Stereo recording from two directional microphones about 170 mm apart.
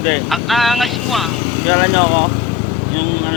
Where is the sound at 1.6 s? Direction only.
45° right (ahead or behind).